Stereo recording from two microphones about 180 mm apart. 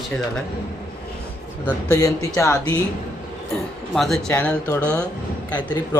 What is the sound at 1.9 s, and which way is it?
Speech, 20° left (ahead or behind).